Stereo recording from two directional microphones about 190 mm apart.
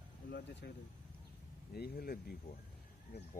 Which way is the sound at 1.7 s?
55° left (ahead or behind).